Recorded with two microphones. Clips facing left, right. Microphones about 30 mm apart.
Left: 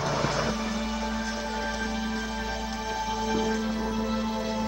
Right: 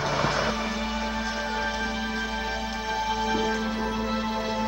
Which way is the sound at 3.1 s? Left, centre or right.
Centre.